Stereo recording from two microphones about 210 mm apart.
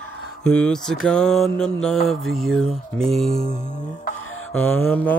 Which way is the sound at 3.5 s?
35° left (ahead or behind).